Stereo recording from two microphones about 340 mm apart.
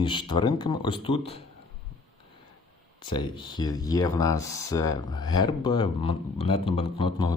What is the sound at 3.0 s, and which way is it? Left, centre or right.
Speech, centre.